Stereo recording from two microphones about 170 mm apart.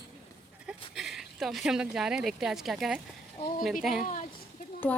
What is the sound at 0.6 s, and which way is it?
Speech, centre (ahead or behind).